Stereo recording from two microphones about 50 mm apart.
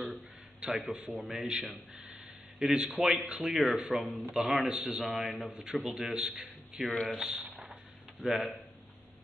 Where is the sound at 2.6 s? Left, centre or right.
Centre.